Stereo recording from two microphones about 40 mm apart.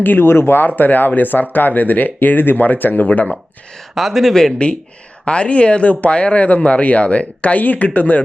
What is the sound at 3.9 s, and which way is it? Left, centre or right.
Speech, centre.